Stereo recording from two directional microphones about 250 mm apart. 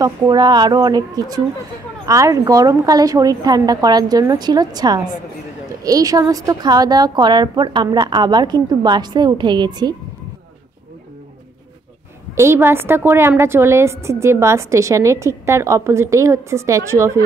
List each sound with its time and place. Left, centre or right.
0.0 s a woman's voice: centre
12.4 s a woman's voice: centre